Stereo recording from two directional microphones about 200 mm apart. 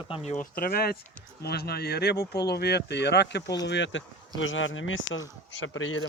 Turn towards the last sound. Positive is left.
turn(degrees=75)  # may be behind; listen again after turning